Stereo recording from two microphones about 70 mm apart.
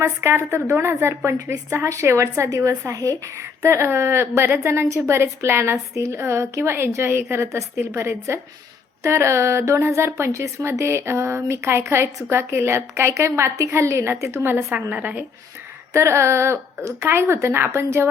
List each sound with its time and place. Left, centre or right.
0.0 s a woman's voice: right
15.9 s a woman's voice: right